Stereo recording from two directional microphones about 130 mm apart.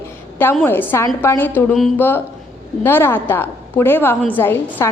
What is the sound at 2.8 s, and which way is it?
A woman's voice, 15° left (ahead or behind).